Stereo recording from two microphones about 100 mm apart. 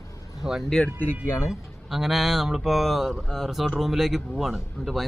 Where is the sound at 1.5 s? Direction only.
Centre (ahead or behind).